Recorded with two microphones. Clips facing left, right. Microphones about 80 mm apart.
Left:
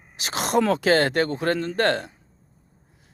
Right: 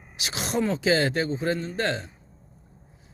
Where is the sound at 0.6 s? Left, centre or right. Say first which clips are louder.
Even; left.